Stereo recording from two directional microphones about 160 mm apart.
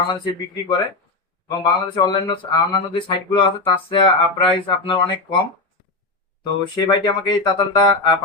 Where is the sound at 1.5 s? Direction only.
25° left (ahead or behind).